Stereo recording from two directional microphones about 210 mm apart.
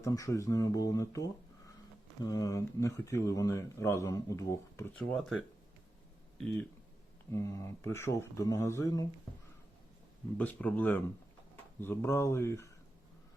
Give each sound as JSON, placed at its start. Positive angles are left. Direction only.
{"t": 0.0, "sound": "speech", "side_deg": 15}
{"t": 7.3, "sound": "speech", "side_deg": 15}
{"t": 10.3, "sound": "speech", "side_deg": 5}